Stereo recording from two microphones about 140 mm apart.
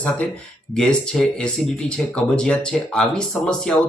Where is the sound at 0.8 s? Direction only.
5° left (ahead or behind).